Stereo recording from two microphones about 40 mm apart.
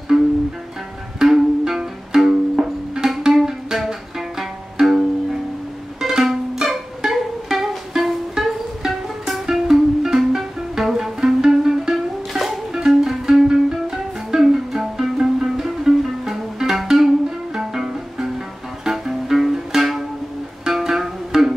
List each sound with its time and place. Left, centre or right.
0.1 s music: centre